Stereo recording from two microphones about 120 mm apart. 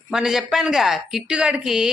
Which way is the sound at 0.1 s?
5° right (ahead or behind).